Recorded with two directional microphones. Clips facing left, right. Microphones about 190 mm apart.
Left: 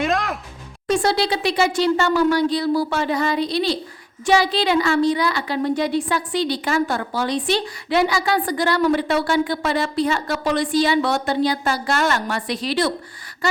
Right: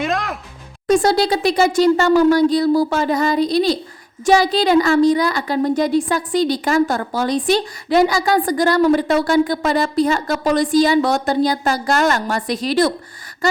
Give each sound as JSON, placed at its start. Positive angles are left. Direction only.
{"t": 0.0, "sound": "music", "side_deg": 0}
{"t": 0.9, "sound": "a woman's voice", "side_deg": -45}